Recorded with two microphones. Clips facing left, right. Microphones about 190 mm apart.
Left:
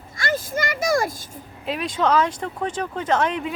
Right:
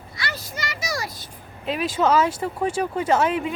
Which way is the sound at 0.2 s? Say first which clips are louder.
Left 8 dB; 50° left (ahead or behind).